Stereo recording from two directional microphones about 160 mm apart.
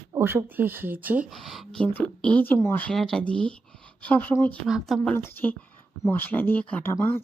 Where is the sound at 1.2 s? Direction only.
Centre (ahead or behind).